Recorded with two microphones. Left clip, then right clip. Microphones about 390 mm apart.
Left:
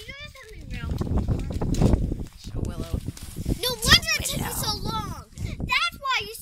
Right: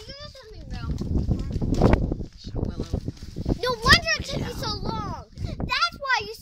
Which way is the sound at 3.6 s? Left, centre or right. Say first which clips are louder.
Right 1 dB; right.